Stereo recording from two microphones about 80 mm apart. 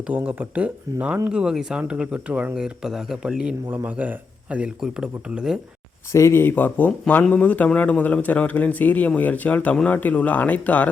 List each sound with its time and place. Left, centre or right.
0.1 s speech: centre
3.8 s speech: centre
6.1 s speech: left; by 10.8 s centre